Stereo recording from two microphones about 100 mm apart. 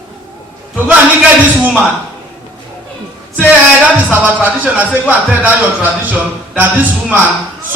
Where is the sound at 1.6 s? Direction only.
20° right (ahead or behind).